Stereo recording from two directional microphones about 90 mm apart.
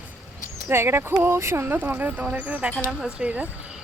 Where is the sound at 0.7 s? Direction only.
30° right (ahead or behind).